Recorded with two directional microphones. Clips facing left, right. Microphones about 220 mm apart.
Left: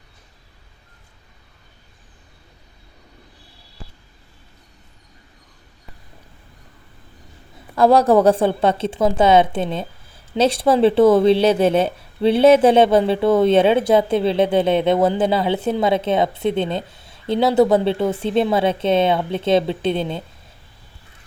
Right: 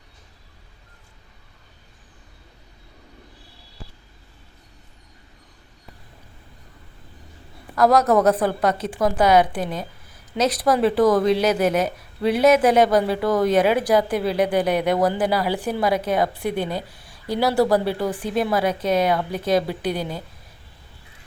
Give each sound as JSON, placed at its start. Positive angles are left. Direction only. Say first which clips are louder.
{"t": 7.8, "sound": "a woman's voice", "louder": "left 3 dB", "side_deg": 30}